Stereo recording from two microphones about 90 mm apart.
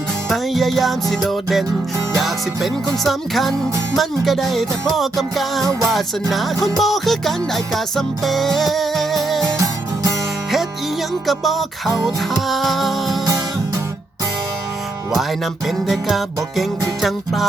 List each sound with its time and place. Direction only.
0.3 s music: centre (ahead or behind)
9.6 s music: 40° right (ahead or behind)
11.3 s music: centre (ahead or behind)
15.1 s music: centre (ahead or behind)